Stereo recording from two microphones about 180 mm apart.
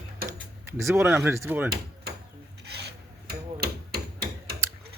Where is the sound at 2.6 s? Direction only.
65° right (ahead or behind).